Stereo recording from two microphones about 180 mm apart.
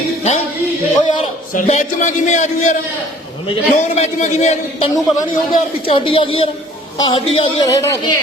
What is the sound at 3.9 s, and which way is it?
A man's voice, 40° left (ahead or behind).